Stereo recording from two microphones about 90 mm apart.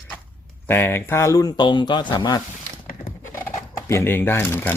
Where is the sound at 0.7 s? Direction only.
25° left (ahead or behind).